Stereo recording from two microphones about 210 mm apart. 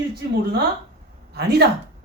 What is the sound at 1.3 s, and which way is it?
Speech, 50° right (ahead or behind).